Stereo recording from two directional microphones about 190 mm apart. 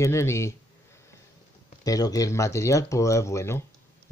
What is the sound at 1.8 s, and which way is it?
Speech, 20° left (ahead or behind).